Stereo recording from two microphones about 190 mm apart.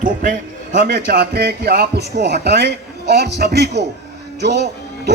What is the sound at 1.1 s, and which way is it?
A man's voice, 60° right (ahead or behind).